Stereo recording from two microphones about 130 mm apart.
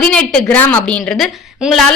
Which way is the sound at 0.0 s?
5° left (ahead or behind).